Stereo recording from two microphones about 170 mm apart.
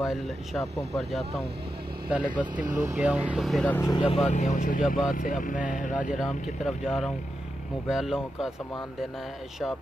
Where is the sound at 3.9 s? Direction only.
35° left (ahead or behind).